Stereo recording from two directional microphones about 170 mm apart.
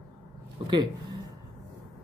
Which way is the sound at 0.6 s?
25° right (ahead or behind).